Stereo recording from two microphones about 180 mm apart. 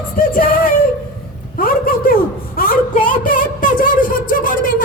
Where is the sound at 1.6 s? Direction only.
55° left (ahead or behind).